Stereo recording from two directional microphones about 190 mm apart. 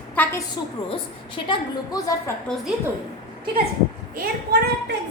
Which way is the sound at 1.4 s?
20° left (ahead or behind).